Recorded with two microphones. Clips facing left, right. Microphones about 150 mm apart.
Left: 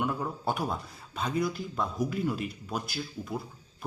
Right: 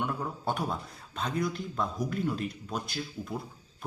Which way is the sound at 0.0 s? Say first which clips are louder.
Left 2 dB; 5° left (ahead or behind).